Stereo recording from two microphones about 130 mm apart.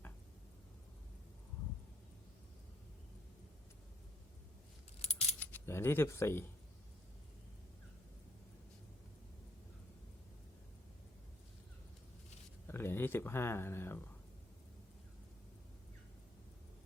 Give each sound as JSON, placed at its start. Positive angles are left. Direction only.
{"t": 5.4, "sound": "speech", "side_deg": 15}
{"t": 12.6, "sound": "speech", "side_deg": 15}